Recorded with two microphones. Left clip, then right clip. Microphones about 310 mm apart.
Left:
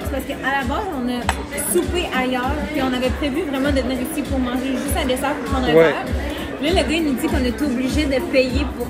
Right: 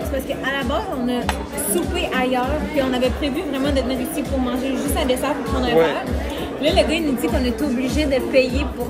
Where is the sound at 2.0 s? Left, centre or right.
Centre.